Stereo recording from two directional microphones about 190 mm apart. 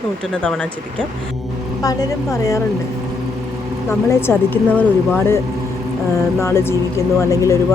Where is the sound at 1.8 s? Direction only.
15° left (ahead or behind).